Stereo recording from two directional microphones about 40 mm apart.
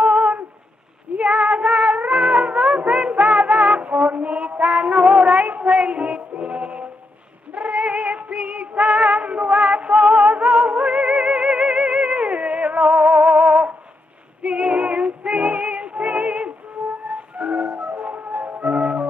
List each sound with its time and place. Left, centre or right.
0.0 s a sound: right
1.2 s music: right
7.5 s female singing: right
8.4 s music: right